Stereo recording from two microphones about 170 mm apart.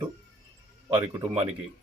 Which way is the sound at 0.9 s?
25° right (ahead or behind).